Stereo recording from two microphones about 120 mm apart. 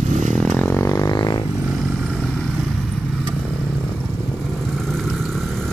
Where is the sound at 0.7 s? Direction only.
20° left (ahead or behind).